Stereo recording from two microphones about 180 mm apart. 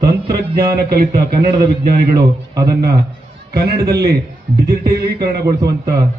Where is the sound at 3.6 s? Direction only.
65° right (ahead or behind).